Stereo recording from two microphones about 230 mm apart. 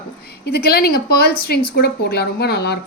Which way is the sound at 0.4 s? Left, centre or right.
Left.